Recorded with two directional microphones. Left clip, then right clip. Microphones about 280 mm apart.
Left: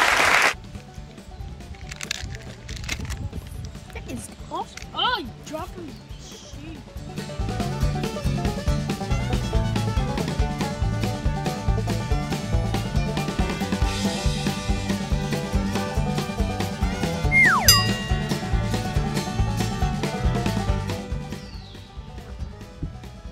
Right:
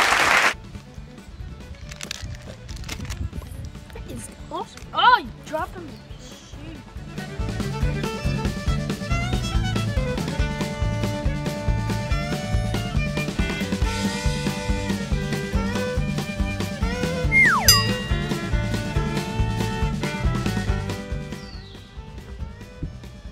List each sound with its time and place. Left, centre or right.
2.0 s music: centre
4.6 s a sound: centre
7.2 s music: centre